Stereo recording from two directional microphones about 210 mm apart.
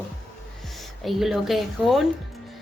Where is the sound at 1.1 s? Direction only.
Centre (ahead or behind).